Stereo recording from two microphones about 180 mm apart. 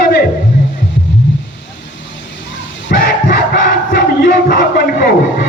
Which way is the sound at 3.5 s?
65° left (ahead or behind).